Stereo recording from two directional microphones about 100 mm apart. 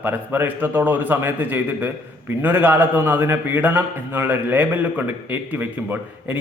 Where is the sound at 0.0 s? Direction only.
20° right (ahead or behind).